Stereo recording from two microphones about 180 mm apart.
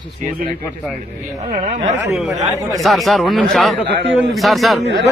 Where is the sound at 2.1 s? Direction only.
Centre (ahead or behind).